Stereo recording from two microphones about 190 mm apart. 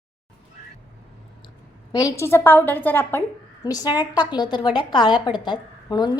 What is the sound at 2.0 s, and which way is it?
A woman's voice, 15° left (ahead or behind).